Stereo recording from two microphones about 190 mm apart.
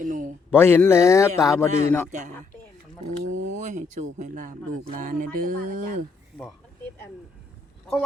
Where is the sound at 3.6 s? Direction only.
40° right (ahead or behind).